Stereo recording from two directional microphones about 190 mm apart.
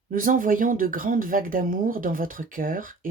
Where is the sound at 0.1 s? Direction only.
45° right (ahead or behind).